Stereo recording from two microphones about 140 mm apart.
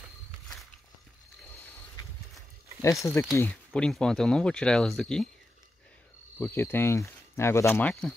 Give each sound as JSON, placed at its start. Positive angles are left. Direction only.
{"t": 2.8, "sound": "speech", "side_deg": 20}
{"t": 3.3, "sound": "speech", "side_deg": 10}
{"t": 6.3, "sound": "speech", "side_deg": 15}